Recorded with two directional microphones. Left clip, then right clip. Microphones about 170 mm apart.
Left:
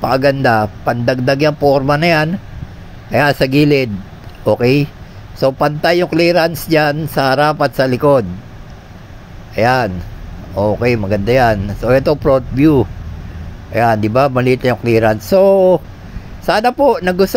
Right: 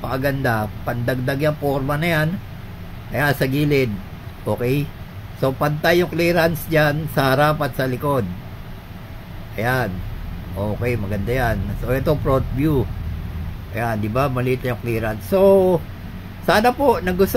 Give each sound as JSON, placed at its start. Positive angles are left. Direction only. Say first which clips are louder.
{"t": 0.0, "sound": "a man's voice", "louder": "left 10 dB", "side_deg": 40}
{"t": 9.6, "sound": "a man's voice", "louder": "left 9 dB", "side_deg": 40}